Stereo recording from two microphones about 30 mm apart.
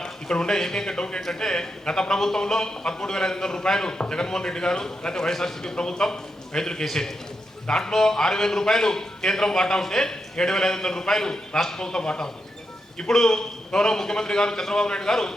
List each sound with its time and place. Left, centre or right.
0.0 s speech: left
1.2 s a man's voice: centre